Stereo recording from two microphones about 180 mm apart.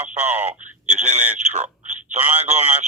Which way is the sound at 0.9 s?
40° right (ahead or behind).